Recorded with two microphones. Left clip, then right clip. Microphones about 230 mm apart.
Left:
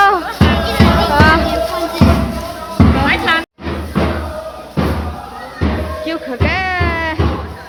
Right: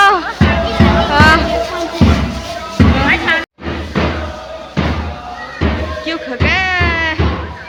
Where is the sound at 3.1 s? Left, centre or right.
Left.